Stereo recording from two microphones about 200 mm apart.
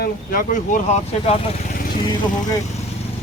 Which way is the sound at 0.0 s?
45° left (ahead or behind).